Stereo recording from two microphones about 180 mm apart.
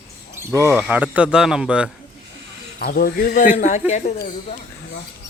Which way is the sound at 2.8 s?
55° left (ahead or behind).